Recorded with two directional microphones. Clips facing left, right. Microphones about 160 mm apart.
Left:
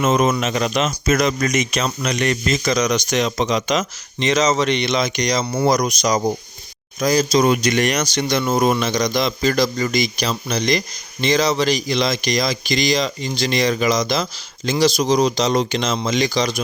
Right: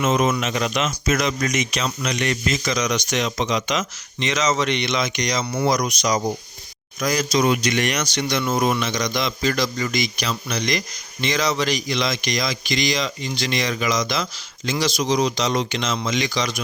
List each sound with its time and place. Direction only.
0.0 s speech: 40° left (ahead or behind)